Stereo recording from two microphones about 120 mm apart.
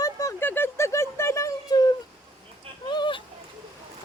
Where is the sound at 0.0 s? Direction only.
30° left (ahead or behind).